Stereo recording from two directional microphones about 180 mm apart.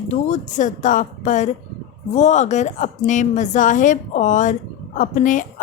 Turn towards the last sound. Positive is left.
turn(degrees=45)  # may be behind; listen again after turning